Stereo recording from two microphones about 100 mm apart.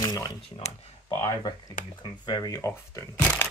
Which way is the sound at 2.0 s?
45° left (ahead or behind).